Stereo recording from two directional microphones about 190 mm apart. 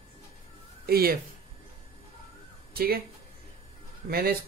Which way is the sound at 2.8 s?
55° right (ahead or behind).